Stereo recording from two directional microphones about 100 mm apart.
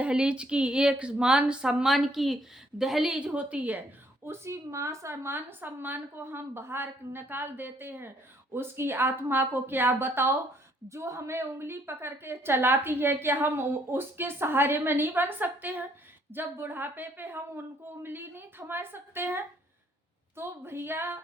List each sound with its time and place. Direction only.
0.0 s speech: 10° right (ahead or behind)
4.3 s a woman's voice: 25° right (ahead or behind)